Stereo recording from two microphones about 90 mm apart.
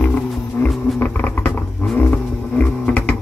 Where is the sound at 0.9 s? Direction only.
20° left (ahead or behind).